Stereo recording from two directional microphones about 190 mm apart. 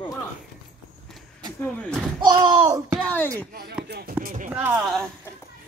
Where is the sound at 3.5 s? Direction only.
55° right (ahead or behind).